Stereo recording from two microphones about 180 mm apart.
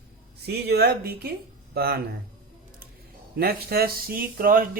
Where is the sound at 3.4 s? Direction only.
60° right (ahead or behind).